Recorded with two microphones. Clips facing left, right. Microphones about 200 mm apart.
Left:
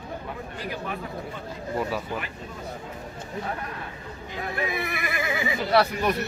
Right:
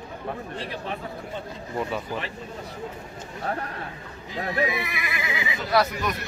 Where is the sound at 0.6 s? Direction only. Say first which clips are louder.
Even; 25° right (ahead or behind).